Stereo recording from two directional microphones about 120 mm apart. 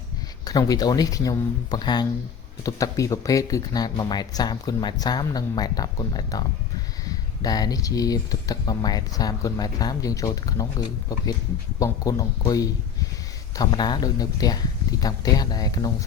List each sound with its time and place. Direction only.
0.4 s speech: 30° left (ahead or behind)